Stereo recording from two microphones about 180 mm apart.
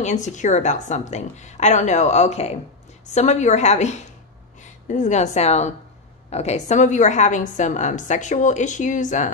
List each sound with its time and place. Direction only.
0.0 s a woman's voice: 40° left (ahead or behind)